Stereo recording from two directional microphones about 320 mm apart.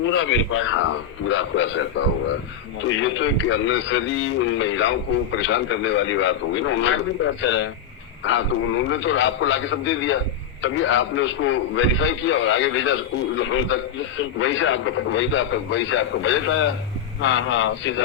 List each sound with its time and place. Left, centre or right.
0.0 s a man's voice: left